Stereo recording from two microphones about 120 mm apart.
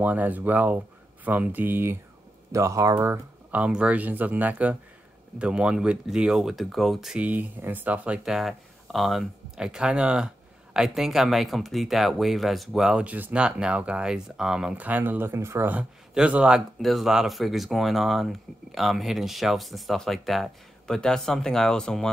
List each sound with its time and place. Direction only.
0.0 s speech: 15° right (ahead or behind)
3.5 s speech: 10° right (ahead or behind)
16.2 s speech: 10° right (ahead or behind)